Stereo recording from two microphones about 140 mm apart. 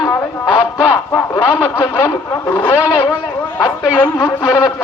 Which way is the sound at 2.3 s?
15° left (ahead or behind).